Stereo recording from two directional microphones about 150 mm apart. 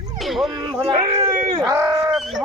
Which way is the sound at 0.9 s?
50° right (ahead or behind).